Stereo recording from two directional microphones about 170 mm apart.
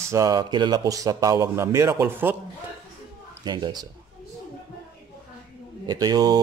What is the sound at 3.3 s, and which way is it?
Speech, 25° right (ahead or behind).